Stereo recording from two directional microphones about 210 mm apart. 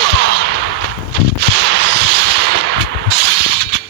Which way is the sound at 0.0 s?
55° right (ahead or behind).